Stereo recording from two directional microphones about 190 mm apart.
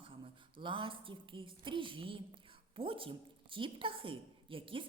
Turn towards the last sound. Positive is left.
turn(degrees=-25)  # may be behind; listen again after turning